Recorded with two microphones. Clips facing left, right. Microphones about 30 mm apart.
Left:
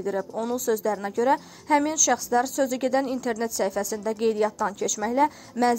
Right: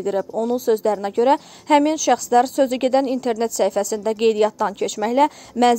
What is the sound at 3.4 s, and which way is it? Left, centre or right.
Speech, right.